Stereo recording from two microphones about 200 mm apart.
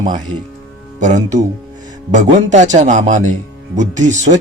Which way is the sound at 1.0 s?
35° right (ahead or behind).